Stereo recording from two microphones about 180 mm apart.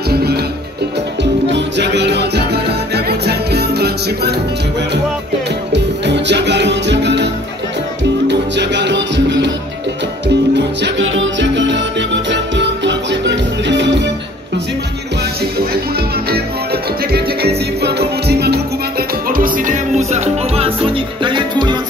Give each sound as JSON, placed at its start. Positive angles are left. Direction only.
{"t": 0.1, "sound": "music", "side_deg": -60}
{"t": 1.5, "sound": "music", "side_deg": -75}
{"t": 5.7, "sound": "music", "side_deg": -75}
{"t": 8.3, "sound": "music", "side_deg": -75}
{"t": 17.8, "sound": "music", "side_deg": -65}